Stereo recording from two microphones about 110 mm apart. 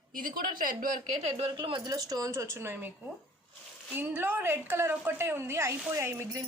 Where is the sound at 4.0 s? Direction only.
15° right (ahead or behind).